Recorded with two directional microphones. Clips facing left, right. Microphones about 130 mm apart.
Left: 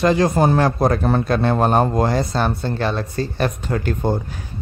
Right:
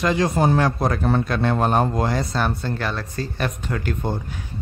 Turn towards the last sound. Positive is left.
turn(degrees=35)  # may be behind; listen again after turning